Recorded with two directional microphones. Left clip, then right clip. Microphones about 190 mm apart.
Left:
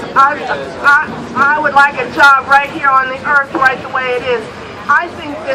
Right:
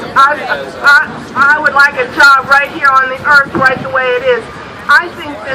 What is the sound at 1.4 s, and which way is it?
Speech, 40° left (ahead or behind).